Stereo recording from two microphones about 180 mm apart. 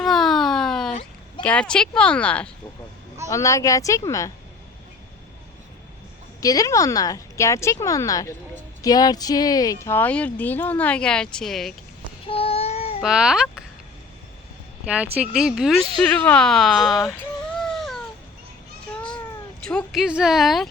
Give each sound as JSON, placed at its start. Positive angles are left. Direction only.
{"t": 0.0, "sound": "a sound", "side_deg": 0}
{"t": 1.4, "sound": "speech", "side_deg": 5}
{"t": 6.4, "sound": "a woman's voice", "side_deg": 20}
{"t": 12.3, "sound": "child singing", "side_deg": 30}
{"t": 13.0, "sound": "speech", "side_deg": -5}
{"t": 14.8, "sound": "speech", "side_deg": -5}
{"t": 17.6, "sound": "a sound", "side_deg": 0}
{"t": 19.6, "sound": "speech", "side_deg": 0}